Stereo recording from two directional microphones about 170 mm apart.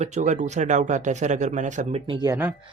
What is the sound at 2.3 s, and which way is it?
Speech, 15° right (ahead or behind).